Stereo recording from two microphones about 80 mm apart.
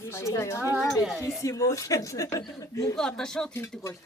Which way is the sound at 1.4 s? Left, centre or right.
Left.